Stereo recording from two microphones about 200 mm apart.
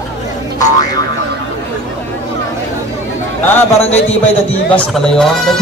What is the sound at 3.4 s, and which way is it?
Speech, 10° left (ahead or behind).